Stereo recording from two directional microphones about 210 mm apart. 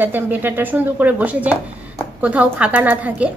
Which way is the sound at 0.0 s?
10° right (ahead or behind).